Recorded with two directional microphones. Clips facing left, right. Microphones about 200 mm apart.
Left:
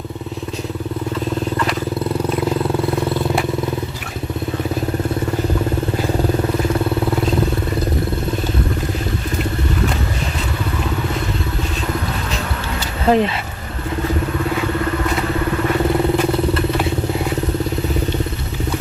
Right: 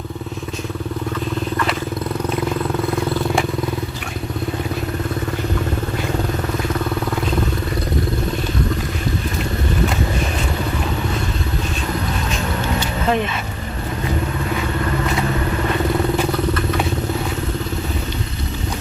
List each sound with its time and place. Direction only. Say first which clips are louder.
13.1 s speech: left 5 dB; 35° left (ahead or behind)